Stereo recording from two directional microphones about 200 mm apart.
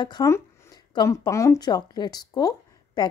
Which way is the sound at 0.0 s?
20° left (ahead or behind).